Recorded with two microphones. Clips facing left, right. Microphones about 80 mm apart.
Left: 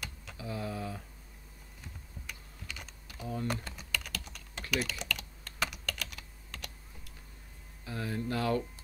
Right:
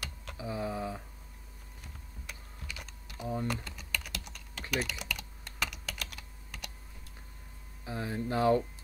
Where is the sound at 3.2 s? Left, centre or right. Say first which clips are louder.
Right 2 dB; right.